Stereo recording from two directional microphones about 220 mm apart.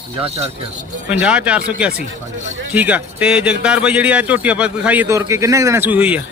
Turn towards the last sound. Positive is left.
turn(degrees=-5)  # may be behind; listen again after turning